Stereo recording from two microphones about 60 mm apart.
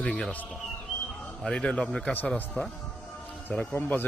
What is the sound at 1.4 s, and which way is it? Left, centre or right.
A man's voice, centre.